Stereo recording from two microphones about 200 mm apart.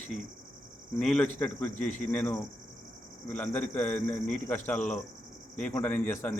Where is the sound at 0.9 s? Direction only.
5° left (ahead or behind).